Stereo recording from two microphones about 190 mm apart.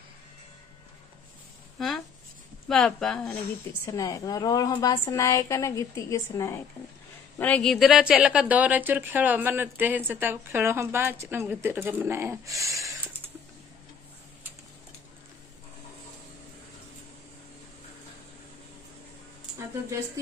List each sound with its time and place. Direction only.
2.7 s speech: centre (ahead or behind)
3.8 s a woman's voice: 15° left (ahead or behind); by 12.9 s 15° right (ahead or behind)